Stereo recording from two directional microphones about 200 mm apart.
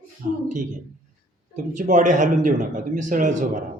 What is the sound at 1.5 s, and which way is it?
A man's voice, 40° right (ahead or behind).